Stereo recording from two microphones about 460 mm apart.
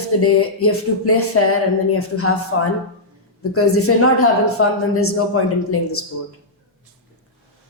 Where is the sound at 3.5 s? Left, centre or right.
Left.